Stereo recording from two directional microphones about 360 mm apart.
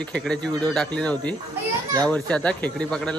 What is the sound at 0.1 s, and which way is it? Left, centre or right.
Speech, centre.